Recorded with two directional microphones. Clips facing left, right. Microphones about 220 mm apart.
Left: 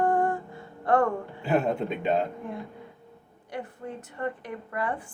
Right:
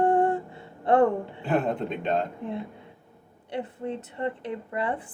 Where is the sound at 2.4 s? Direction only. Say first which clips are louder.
Right 3 dB; 20° right (ahead or behind).